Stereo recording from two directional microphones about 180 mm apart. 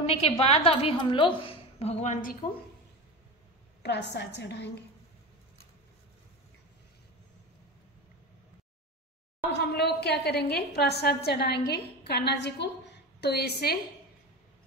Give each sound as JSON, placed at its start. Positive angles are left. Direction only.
{"t": 0.0, "sound": "a woman's voice", "side_deg": 35}
{"t": 3.8, "sound": "a woman's voice", "side_deg": 70}
{"t": 9.6, "sound": "a woman's voice", "side_deg": 65}